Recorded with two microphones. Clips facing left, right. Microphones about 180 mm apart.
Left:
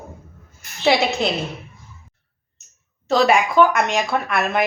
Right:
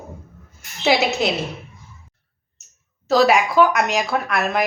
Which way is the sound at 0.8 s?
5° right (ahead or behind).